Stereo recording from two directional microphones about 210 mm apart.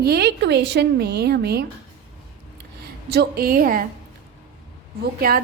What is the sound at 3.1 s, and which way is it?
Speech, 50° right (ahead or behind).